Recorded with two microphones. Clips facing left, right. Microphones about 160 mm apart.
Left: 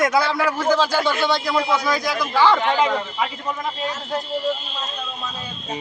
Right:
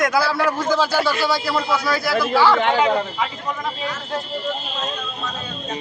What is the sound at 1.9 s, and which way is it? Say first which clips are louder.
Speech: right 2 dB; 15° left (ahead or behind).